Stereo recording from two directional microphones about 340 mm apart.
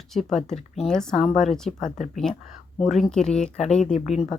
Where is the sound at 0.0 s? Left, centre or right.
Centre.